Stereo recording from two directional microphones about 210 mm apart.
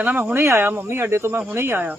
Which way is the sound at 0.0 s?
5° right (ahead or behind).